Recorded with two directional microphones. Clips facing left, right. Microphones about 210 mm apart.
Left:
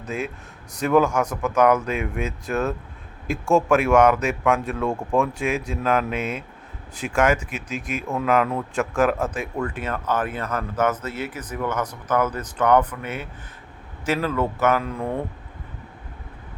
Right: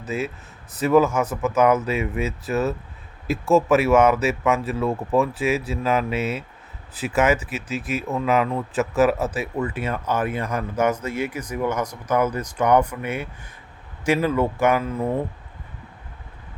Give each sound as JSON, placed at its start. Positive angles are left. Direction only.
{"t": 0.0, "sound": "a man's voice", "side_deg": -5}